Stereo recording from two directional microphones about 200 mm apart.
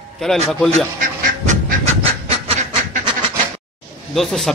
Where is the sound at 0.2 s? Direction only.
5° left (ahead or behind).